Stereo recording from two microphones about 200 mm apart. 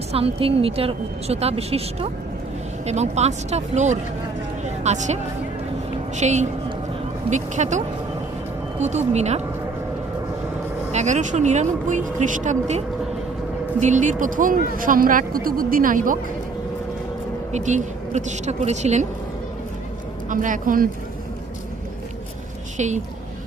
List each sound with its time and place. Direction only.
0.1 s a woman's voice: 30° right (ahead or behind)
10.9 s speech: 35° right (ahead or behind)
17.5 s speech: 35° right (ahead or behind)
20.3 s speech: 40° right (ahead or behind)
22.8 s speech: 35° right (ahead or behind)